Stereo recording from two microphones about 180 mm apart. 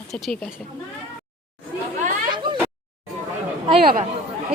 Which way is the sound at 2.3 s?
25° right (ahead or behind).